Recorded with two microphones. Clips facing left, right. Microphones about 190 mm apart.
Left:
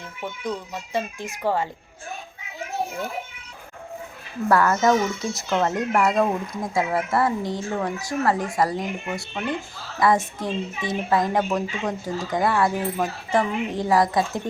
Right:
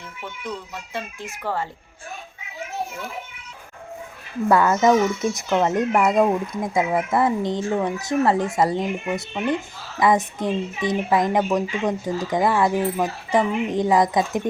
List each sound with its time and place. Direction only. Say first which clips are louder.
0.4 s speech: left 2 dB; 15° left (ahead or behind)
4.4 s speech: right 2 dB; 20° right (ahead or behind)